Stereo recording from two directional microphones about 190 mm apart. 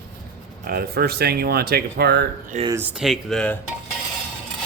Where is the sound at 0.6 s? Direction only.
55° right (ahead or behind).